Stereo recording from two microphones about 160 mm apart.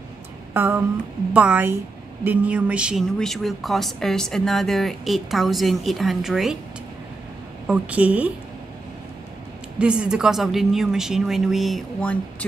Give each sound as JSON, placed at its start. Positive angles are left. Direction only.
{"t": 0.5, "sound": "a sound", "side_deg": -10}
{"t": 1.3, "sound": "a woman's voice", "side_deg": -10}
{"t": 7.6, "sound": "a woman's voice", "side_deg": -10}
{"t": 9.8, "sound": "speech", "side_deg": -5}